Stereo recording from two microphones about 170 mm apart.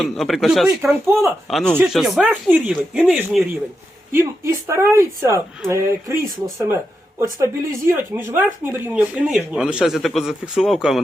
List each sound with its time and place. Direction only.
0.0 s speech: centre (ahead or behind)
0.8 s speech: 15° right (ahead or behind)
1.5 s speech: 5° left (ahead or behind)
4.1 s speech: 15° right (ahead or behind)